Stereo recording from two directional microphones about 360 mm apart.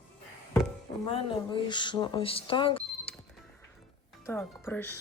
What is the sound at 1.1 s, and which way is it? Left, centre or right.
Speech, centre.